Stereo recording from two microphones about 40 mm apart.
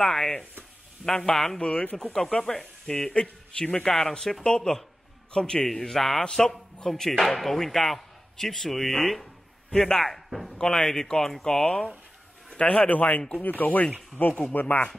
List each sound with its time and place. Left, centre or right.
0.0 s speech: centre
1.6 s speech: left
4.1 s speech: centre
6.2 s speech: centre
10.6 s speech: centre
11.6 s speech: left
12.5 s a man's voice: left
14.2 s speech: left